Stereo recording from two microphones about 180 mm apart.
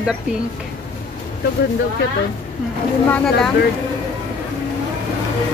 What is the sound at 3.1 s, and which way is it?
Speech, 5° left (ahead or behind).